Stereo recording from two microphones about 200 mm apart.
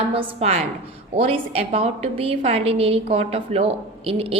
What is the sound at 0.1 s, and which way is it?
A woman's voice, 30° right (ahead or behind).